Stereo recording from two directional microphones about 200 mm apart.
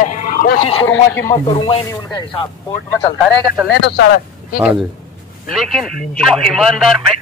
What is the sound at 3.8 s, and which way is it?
Speech, 60° left (ahead or behind).